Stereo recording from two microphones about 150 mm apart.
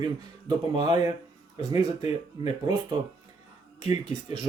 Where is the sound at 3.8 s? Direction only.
45° left (ahead or behind).